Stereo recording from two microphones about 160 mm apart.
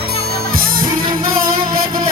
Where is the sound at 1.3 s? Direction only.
65° right (ahead or behind).